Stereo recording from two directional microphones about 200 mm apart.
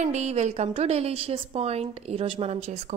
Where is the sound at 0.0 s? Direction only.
35° right (ahead or behind).